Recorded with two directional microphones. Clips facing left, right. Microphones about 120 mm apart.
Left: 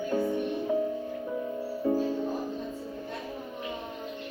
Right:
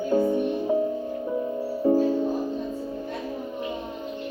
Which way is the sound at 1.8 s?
25° right (ahead or behind).